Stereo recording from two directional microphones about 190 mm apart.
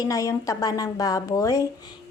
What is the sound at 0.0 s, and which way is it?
A woman's voice, 15° left (ahead or behind).